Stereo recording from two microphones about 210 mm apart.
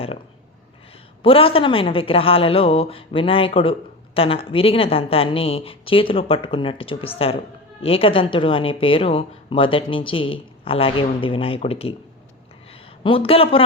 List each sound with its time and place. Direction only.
1.2 s speech: 25° left (ahead or behind)
13.0 s speech: 25° left (ahead or behind)